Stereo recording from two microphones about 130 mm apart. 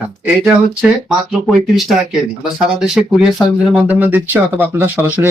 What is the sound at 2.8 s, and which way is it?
Speech, 5° right (ahead or behind).